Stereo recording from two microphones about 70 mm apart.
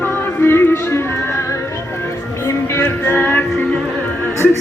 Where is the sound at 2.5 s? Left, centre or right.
Left.